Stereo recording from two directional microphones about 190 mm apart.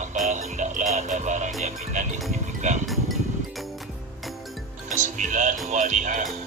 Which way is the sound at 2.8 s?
Centre (ahead or behind).